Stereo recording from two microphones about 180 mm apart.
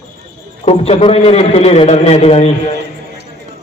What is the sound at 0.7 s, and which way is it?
A man's voice, 35° left (ahead or behind).